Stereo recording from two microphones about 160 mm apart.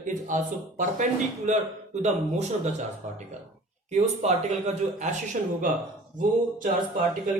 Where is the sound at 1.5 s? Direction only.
50° right (ahead or behind).